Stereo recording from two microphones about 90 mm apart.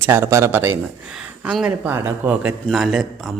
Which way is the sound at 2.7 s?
5° right (ahead or behind).